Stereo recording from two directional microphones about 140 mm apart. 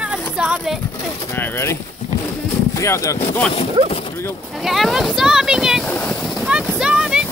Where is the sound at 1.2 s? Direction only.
15° left (ahead or behind).